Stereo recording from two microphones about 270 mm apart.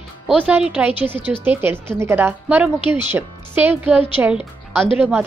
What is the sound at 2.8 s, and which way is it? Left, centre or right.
Speech, centre.